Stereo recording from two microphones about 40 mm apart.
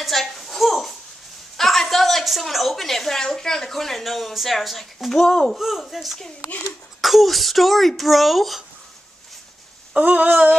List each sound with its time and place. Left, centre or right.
0.0 s a sound: centre
1.6 s a woman's voice: centre
5.6 s speech: centre
9.9 s speech: right